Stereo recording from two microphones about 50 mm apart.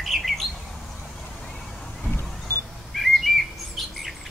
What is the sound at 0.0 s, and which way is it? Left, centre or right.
Bird, centre.